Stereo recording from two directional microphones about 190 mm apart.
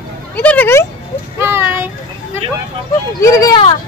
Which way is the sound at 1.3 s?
10° right (ahead or behind).